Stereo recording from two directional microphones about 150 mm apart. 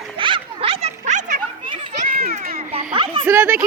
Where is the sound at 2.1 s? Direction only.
85° right.